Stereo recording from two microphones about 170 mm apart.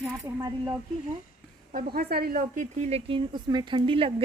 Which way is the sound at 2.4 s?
45° right (ahead or behind).